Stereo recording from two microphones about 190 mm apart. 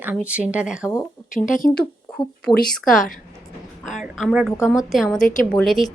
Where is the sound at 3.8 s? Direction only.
Centre (ahead or behind).